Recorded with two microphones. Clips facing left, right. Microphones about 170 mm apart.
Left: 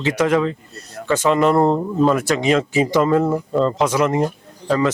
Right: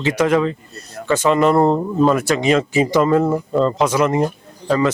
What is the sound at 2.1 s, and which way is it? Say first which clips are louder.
Speech: right 1 dB; 10° right (ahead or behind).